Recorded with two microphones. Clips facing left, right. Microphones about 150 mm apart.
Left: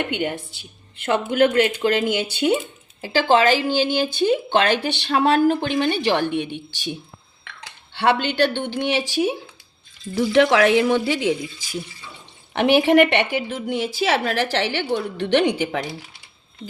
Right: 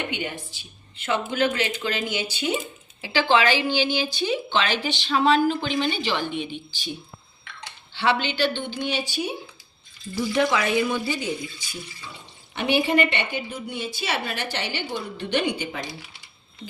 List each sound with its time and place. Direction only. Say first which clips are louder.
0.1 s speech: left 6 dB; 55° left (ahead or behind)
3.0 s speech: left 4 dB; 45° left (ahead or behind); by 6.9 s 60° left (ahead or behind)
7.9 s speech: left 5 dB; 55° left (ahead or behind); by 9.3 s 90° left
10.2 s a woman's voice: left 7 dB; 70° left (ahead or behind); by 15.8 s 90° left